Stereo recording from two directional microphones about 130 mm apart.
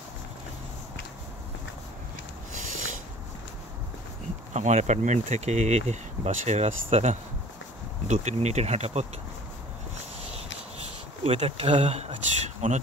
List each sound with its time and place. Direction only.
2.5 s a sound: 75° right (ahead or behind)
4.6 s speech: 65° right (ahead or behind)
10.3 s speech: 50° right (ahead or behind); by 12.8 s 65° right (ahead or behind)